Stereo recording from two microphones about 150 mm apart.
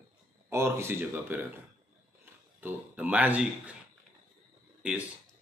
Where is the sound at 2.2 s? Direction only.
15° right (ahead or behind).